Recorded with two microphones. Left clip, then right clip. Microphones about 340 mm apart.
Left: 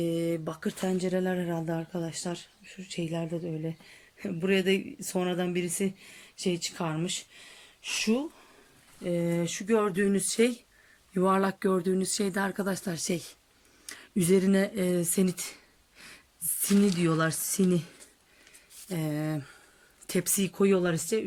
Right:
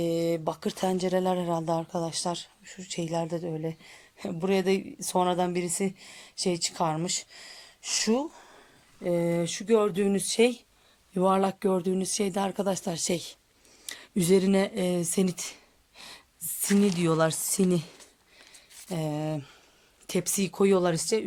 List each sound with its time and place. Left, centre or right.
0.0 s a sound: centre
0.4 s speech: centre
1.4 s speech: right
2.1 s speech: centre
4.2 s speech: centre
18.9 s speech: centre